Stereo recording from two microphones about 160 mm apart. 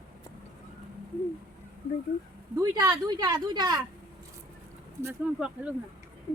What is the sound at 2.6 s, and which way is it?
Speech, 20° right (ahead or behind).